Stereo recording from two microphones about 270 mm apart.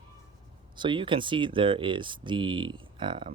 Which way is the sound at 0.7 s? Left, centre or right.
Centre.